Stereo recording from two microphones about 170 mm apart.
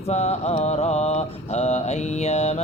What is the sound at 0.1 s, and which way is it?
Mantra, 40° left (ahead or behind).